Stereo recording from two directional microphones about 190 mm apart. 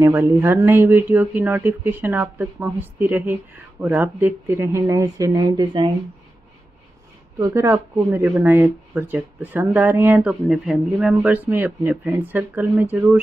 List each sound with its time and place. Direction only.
0.0 s speech: 10° right (ahead or behind)
7.3 s speech: 15° right (ahead or behind)